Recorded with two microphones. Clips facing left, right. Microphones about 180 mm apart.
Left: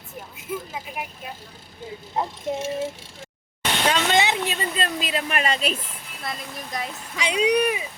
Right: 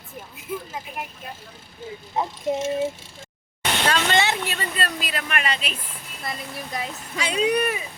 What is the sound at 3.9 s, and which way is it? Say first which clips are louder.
Speech: left 1 dB; 15° left (ahead or behind).